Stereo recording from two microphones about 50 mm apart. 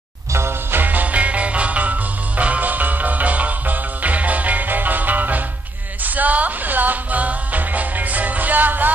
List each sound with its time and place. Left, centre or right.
0.3 s music: right
0.7 s music: right